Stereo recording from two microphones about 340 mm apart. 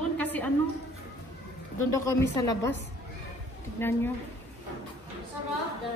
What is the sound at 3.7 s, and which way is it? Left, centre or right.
Speech, centre.